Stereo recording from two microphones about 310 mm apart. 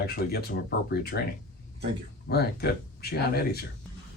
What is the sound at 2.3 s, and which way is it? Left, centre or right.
Speech, left.